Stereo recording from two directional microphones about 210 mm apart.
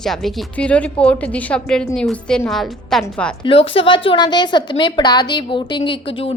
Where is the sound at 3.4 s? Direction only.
25° left (ahead or behind).